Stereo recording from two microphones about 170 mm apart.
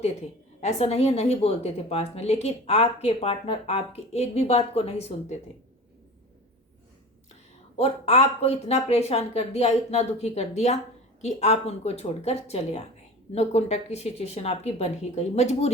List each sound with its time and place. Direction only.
0.6 s a woman's voice: 40° left (ahead or behind)
7.8 s a woman's voice: 35° left (ahead or behind)